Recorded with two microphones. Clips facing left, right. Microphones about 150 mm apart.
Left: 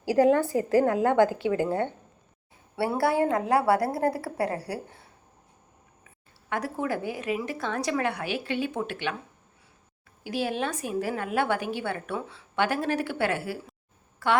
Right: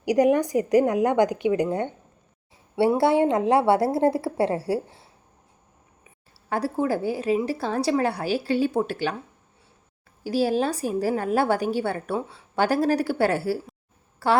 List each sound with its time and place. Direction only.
0.0 s a woman's voice: 15° right (ahead or behind)
6.5 s a woman's voice: 30° right (ahead or behind)
10.2 s a woman's voice: 35° right (ahead or behind)